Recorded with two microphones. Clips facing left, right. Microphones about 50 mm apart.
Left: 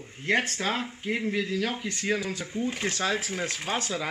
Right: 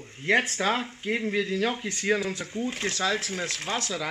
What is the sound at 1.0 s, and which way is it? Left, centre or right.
Speech, centre.